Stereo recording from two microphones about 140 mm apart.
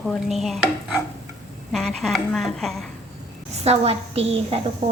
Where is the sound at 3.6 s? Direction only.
45° right (ahead or behind).